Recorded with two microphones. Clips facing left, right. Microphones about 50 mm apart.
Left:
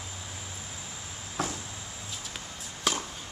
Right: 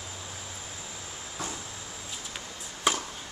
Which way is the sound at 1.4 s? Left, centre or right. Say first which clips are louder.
Left 5 dB; left.